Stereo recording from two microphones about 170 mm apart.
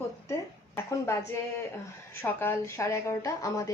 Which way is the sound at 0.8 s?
15° left (ahead or behind).